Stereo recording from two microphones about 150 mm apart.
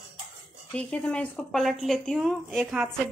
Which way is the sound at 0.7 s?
10° left (ahead or behind).